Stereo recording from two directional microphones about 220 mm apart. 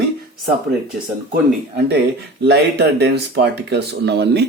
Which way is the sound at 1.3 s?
45° right (ahead or behind).